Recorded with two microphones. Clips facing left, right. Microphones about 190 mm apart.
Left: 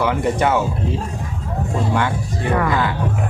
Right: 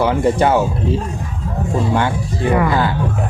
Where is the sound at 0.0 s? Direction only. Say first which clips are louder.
Right 4 dB; 30° right (ahead or behind).